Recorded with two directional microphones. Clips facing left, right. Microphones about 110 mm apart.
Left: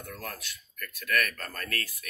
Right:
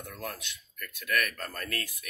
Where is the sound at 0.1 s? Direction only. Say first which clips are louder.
Even; 15° right (ahead or behind).